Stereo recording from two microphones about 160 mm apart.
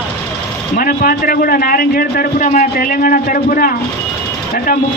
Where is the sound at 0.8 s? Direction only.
65° left (ahead or behind).